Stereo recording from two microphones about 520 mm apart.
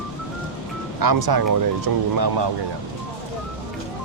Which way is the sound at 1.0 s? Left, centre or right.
Right.